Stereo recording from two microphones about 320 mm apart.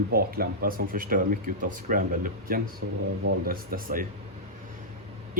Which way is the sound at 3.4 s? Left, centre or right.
Right.